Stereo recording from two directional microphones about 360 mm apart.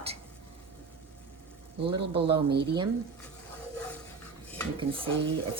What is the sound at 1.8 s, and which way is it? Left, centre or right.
Speech, centre.